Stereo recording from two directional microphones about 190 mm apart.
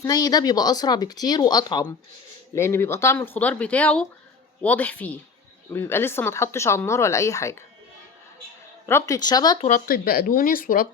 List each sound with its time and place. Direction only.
0.0 s speech: 20° left (ahead or behind)
8.9 s speech: 15° left (ahead or behind)
9.6 s speech: 45° left (ahead or behind)